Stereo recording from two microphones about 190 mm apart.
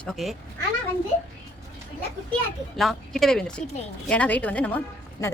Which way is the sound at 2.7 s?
Centre (ahead or behind).